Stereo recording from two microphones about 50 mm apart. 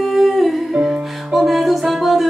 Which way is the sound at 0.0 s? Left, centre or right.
Centre.